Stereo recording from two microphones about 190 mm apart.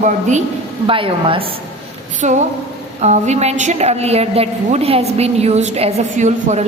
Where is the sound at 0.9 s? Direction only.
30° right (ahead or behind).